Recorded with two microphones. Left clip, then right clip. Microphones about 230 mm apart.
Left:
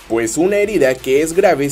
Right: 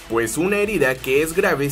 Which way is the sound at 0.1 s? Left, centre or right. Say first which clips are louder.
Left 5 dB; centre.